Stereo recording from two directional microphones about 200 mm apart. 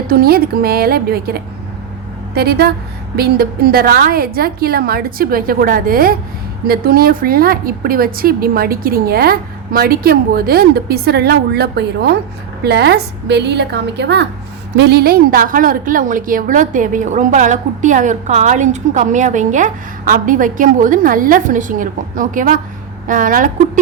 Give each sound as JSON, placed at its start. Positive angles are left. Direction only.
{"t": 0.1, "sound": "a woman's voice", "side_deg": -50}